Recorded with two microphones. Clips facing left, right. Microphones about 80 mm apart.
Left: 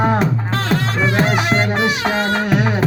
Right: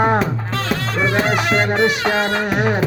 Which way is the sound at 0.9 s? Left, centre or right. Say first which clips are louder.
Right 1 dB; centre.